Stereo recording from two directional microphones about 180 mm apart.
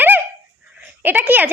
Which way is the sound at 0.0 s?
10° right (ahead or behind).